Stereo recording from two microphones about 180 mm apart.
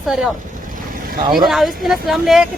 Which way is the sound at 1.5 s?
Centre (ahead or behind).